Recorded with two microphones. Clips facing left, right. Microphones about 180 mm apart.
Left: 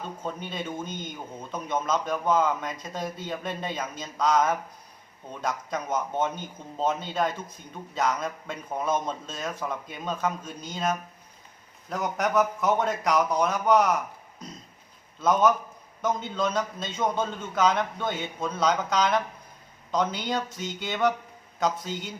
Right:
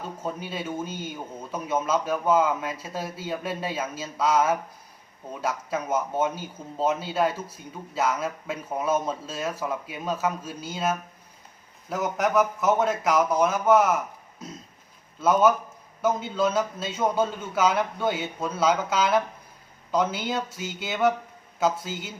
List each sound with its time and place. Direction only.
0.2 s speech: 5° right (ahead or behind)
15.2 s speech: 5° right (ahead or behind)